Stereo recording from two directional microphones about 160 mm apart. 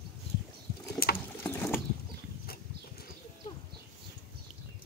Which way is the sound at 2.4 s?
70° left (ahead or behind).